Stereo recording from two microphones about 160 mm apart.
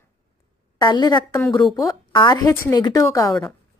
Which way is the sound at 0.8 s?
25° left (ahead or behind).